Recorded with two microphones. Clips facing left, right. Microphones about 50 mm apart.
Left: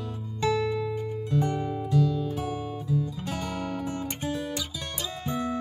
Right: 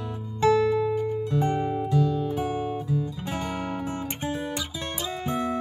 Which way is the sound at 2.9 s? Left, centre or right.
Right.